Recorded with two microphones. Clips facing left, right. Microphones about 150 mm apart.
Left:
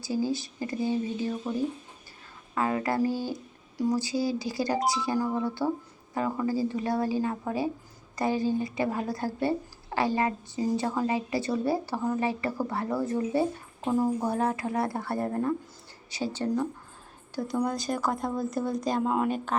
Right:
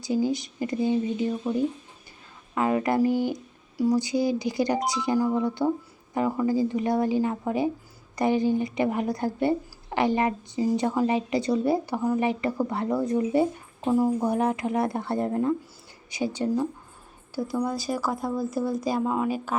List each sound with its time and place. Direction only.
0.0 s a woman's voice: 20° right (ahead or behind)
2.6 s a woman's voice: 20° right (ahead or behind); by 19.5 s centre (ahead or behind)